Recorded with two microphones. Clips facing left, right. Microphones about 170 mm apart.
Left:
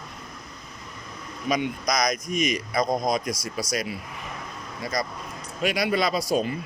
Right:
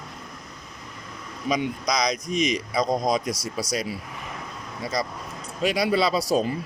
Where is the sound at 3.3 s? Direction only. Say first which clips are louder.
Right 1 dB; 70° right (ahead or behind).